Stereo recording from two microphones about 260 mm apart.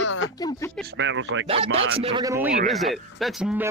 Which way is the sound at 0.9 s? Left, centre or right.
Right.